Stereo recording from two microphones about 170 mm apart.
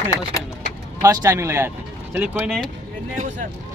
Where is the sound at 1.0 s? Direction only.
15° right (ahead or behind).